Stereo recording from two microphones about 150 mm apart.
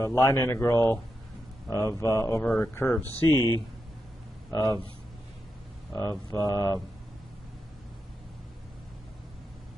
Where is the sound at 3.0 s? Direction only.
25° right (ahead or behind).